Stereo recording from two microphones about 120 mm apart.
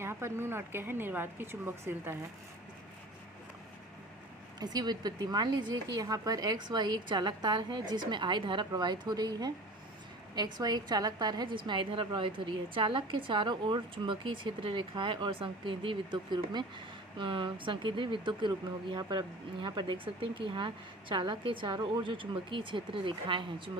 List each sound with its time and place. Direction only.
0.0 s a woman's voice: 20° right (ahead or behind)
4.6 s a woman's voice: 35° right (ahead or behind)